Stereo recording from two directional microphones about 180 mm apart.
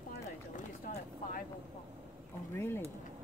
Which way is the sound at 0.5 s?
45° left (ahead or behind).